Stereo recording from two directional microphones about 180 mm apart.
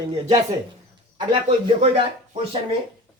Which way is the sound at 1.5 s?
35° right (ahead or behind).